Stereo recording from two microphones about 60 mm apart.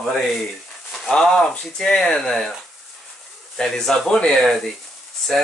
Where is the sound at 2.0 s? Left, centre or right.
Centre.